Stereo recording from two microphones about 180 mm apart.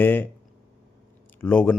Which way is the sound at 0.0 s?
10° left (ahead or behind).